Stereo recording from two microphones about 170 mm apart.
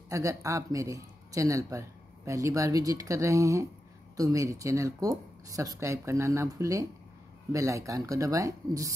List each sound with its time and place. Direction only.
0.1 s speech: 20° right (ahead or behind)